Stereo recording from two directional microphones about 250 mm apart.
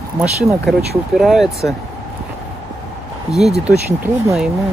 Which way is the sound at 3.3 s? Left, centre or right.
Centre.